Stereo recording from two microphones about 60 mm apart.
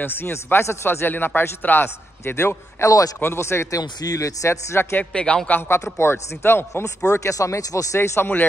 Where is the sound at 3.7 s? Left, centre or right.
Left.